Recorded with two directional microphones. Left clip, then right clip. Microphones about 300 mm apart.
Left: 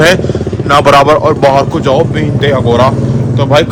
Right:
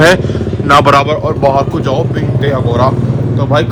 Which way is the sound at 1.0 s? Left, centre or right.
Left.